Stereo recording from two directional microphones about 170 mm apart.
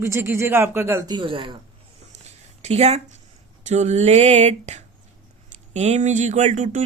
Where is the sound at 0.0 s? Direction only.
15° right (ahead or behind).